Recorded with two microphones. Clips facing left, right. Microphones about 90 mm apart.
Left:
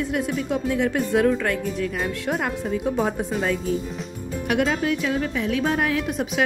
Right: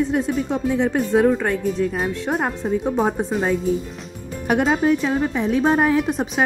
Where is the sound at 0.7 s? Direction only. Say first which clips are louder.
Right 3 dB; 15° right (ahead or behind).